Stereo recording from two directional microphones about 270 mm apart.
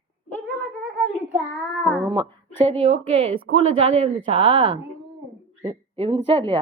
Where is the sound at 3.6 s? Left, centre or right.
Right.